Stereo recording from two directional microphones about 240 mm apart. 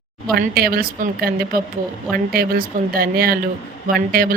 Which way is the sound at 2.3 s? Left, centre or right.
Right.